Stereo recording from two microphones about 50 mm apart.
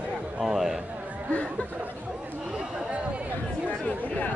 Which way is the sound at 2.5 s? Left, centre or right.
Centre.